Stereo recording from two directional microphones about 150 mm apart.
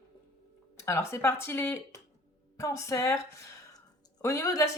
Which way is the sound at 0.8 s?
20° left (ahead or behind).